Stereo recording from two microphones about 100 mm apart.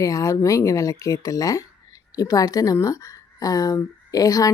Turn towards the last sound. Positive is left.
turn(degrees=35)  # may be behind; listen again after turning